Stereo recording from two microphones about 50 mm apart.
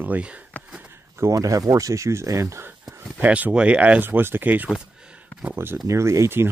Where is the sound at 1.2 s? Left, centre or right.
Right.